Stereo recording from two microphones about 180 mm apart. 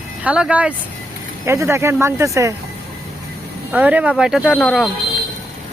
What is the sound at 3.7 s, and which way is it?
Speech, 10° right (ahead or behind).